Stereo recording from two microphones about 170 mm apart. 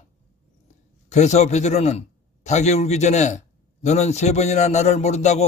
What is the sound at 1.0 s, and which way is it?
A man's voice, 45° left (ahead or behind).